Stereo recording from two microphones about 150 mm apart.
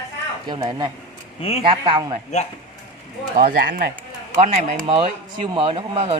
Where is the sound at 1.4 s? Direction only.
40° left (ahead or behind).